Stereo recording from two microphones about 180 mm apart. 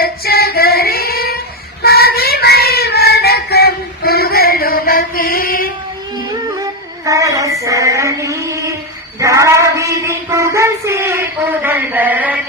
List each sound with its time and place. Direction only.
0.0 s female singing: 60° left (ahead or behind)
1.8 s child singing: 60° left (ahead or behind)
7.0 s female singing: 20° right (ahead or behind)
9.2 s child singing: 15° right (ahead or behind)